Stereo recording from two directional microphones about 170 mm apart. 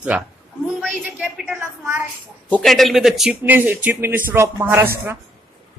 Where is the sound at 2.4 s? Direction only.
5° left (ahead or behind); by 4.8 s 15° right (ahead or behind).